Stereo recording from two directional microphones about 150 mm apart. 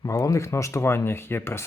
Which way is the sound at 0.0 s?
20° left (ahead or behind).